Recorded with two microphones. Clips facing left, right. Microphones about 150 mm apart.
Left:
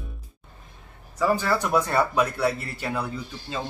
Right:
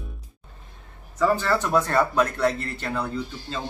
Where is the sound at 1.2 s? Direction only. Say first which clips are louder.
Right 1 dB; 10° left (ahead or behind).